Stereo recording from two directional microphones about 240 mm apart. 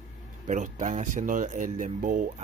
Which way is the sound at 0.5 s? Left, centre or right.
Right.